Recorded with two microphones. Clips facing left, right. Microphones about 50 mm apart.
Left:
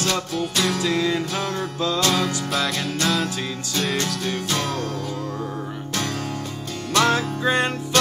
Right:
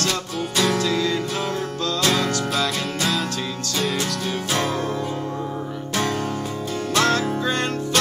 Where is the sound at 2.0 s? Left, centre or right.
Centre.